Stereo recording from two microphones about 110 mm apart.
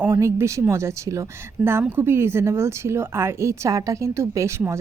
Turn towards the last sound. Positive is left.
turn(degrees=-25)  # may be behind; listen again after turning